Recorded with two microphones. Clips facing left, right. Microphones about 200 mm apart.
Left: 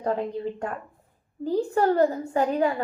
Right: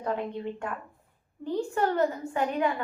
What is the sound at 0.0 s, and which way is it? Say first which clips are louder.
A woman's voice: left 4 dB; 35° left (ahead or behind).